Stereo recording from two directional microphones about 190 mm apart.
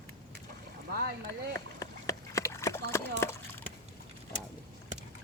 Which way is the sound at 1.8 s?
15° left (ahead or behind).